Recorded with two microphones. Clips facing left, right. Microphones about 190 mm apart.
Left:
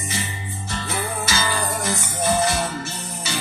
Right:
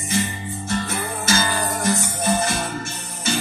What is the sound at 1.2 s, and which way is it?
Music, 50° right (ahead or behind).